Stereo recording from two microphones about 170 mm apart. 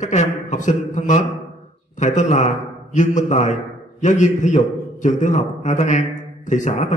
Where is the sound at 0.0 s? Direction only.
45° left (ahead or behind).